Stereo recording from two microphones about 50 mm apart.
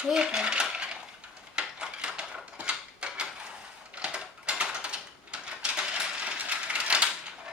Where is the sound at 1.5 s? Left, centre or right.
Centre.